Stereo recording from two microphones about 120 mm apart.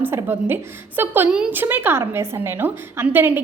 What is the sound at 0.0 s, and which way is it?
A woman's voice, 20° right (ahead or behind).